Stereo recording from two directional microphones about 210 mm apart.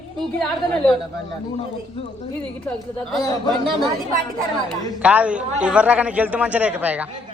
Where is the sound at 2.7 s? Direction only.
Centre (ahead or behind).